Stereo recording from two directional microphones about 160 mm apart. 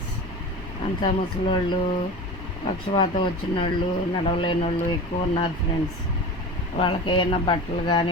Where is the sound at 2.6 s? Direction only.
30° left (ahead or behind).